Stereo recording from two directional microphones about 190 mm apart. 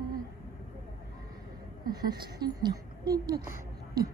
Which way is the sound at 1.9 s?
20° right (ahead or behind).